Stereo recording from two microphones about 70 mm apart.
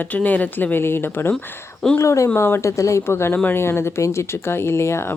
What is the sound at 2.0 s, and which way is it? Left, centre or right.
Speech, left.